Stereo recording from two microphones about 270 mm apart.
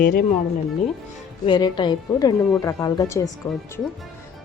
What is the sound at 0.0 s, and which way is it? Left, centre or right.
Speech, left.